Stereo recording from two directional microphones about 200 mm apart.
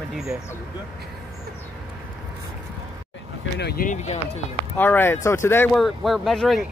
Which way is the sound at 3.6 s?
45° left (ahead or behind).